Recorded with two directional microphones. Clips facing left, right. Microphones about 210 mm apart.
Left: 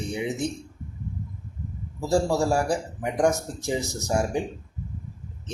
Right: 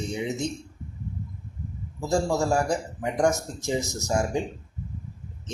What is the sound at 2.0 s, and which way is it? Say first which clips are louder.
Speech: left 2 dB; 15° left (ahead or behind).